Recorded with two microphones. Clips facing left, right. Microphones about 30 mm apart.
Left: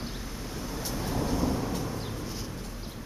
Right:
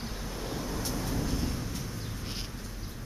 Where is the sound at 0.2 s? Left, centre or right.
Centre.